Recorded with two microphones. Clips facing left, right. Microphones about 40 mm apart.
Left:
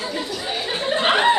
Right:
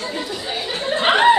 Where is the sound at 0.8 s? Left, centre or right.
Centre.